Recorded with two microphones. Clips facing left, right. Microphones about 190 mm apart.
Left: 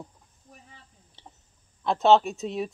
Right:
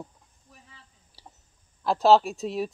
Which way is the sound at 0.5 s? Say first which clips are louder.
Left 4 dB; 45° left (ahead or behind).